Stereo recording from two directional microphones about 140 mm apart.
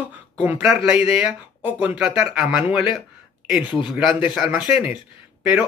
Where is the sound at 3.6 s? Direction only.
35° left (ahead or behind).